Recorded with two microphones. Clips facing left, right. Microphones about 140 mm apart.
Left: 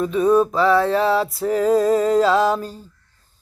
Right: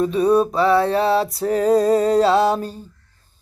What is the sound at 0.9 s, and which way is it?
Music, 30° right (ahead or behind).